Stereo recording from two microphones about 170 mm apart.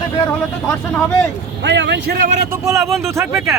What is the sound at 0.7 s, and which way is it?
Speech, 5° left (ahead or behind).